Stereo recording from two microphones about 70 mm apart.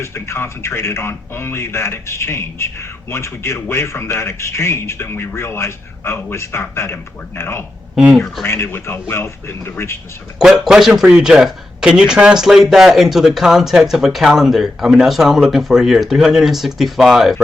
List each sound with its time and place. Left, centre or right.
0.0 s a man's voice: left
10.3 s a man's voice: centre